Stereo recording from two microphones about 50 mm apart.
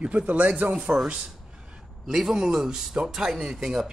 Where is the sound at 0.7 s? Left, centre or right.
Centre.